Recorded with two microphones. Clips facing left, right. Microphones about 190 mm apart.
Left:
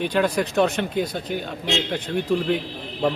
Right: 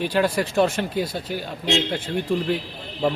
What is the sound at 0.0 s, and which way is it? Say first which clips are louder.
Speech: even; 5° right (ahead or behind).